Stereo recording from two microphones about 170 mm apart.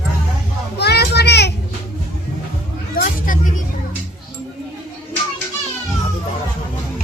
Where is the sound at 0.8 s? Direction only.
75° left (ahead or behind).